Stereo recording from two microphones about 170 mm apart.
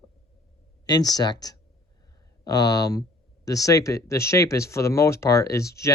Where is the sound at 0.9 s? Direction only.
25° left (ahead or behind).